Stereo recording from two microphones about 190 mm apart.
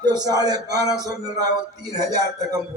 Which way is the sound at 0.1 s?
20° right (ahead or behind).